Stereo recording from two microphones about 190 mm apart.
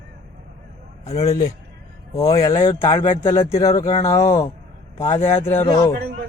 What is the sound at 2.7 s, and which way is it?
Speech, 20° left (ahead or behind).